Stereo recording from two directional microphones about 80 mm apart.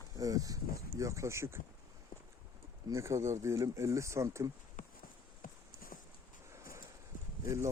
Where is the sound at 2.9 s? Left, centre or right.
Right.